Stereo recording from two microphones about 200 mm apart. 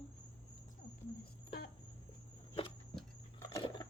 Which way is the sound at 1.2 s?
50° left (ahead or behind).